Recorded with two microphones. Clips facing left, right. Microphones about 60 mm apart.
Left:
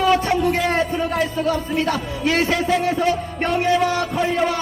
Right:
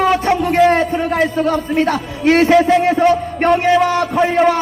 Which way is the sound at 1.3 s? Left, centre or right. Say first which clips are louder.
Right 5 dB; right.